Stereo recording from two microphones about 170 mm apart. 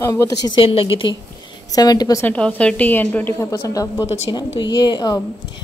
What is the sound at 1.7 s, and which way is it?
Speech, 20° left (ahead or behind).